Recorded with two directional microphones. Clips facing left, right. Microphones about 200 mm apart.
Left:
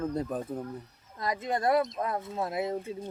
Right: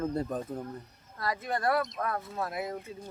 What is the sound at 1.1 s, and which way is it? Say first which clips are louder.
Speech: left 2 dB; 20° left (ahead or behind).